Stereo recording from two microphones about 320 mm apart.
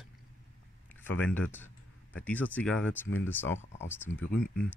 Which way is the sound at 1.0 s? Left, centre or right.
Centre.